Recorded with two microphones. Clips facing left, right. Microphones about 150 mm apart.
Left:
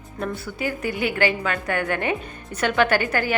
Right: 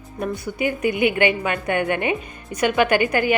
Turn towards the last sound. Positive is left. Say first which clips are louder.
# right 3 dB
turn(degrees=-15)  # may be behind; listen again after turning